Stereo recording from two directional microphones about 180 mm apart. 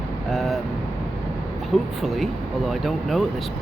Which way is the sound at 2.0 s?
Centre (ahead or behind).